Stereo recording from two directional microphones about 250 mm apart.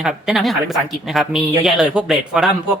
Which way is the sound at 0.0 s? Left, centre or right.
Centre.